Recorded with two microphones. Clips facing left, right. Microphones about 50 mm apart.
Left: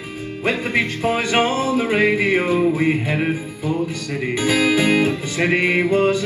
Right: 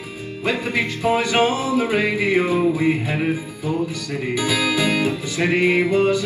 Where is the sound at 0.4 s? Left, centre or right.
Left.